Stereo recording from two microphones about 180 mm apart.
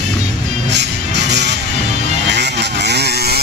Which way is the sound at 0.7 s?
75° right (ahead or behind).